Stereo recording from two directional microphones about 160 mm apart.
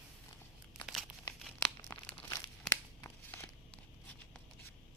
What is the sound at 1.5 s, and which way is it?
Crumpling, 5° left (ahead or behind).